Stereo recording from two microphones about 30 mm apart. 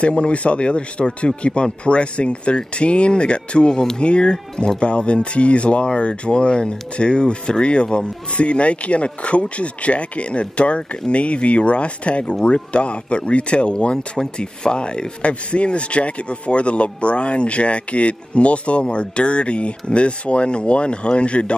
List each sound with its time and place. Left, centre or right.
0.0 s speech: left